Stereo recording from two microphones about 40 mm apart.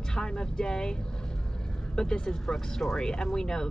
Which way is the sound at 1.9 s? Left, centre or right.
Centre.